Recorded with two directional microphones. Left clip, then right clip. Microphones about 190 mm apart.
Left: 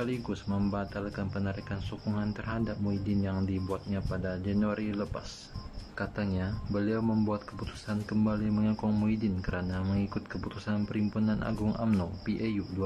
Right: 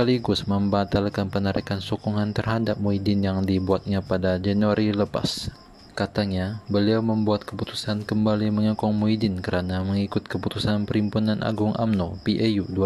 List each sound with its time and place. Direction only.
0.0 s speech: 40° right (ahead or behind)